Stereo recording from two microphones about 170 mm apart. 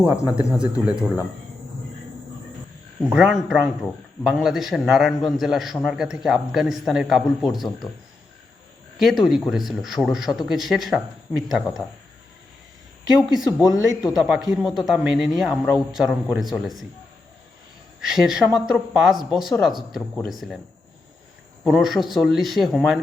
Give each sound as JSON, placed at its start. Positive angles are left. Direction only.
{"t": 0.0, "sound": "a man's voice", "side_deg": -5}
{"t": 3.0, "sound": "a man's voice", "side_deg": -5}
{"t": 9.0, "sound": "a man's voice", "side_deg": 0}
{"t": 13.1, "sound": "a man's voice", "side_deg": -5}
{"t": 18.0, "sound": "a man's voice", "side_deg": -5}
{"t": 21.6, "sound": "a man's voice", "side_deg": 0}